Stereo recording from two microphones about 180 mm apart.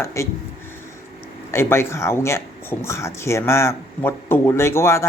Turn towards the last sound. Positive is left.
turn(degrees=15)  # may be behind; listen again after turning